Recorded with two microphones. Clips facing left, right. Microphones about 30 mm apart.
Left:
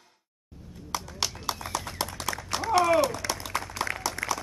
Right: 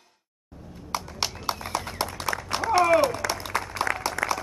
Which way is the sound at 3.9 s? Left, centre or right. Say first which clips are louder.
Right 5 dB; right.